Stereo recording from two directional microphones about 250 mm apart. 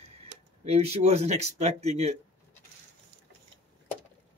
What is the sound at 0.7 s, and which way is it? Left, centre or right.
Speech, right.